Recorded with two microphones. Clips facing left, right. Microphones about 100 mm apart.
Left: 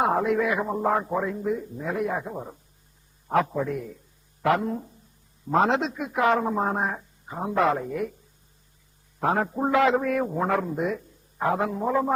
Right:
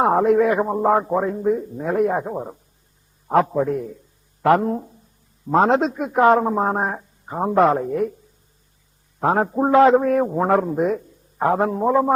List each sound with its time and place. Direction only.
0.0 s a man's voice: 40° right (ahead or behind)
9.2 s a man's voice: 35° right (ahead or behind)